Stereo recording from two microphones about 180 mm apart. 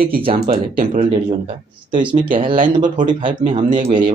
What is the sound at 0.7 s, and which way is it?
Speech, 45° right (ahead or behind).